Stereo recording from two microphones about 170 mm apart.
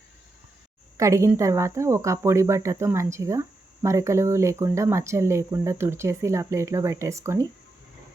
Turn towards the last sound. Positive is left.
turn(degrees=-20)  # may be behind; listen again after turning